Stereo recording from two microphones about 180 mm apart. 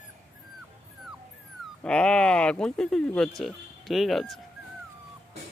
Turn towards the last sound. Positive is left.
turn(degrees=0)  # may be behind; listen again after turning